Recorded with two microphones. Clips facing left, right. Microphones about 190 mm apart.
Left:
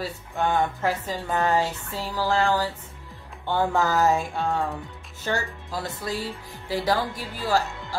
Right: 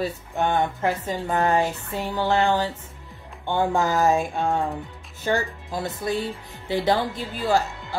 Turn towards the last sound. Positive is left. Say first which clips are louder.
# right 2 dB
turn(degrees=-20)  # may be behind; listen again after turning